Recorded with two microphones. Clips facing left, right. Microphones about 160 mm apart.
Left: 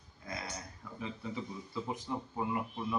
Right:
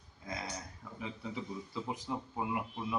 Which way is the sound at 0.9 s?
10° right (ahead or behind).